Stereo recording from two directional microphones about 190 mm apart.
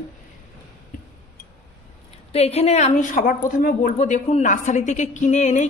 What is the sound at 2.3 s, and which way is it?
A woman's voice, 35° left (ahead or behind).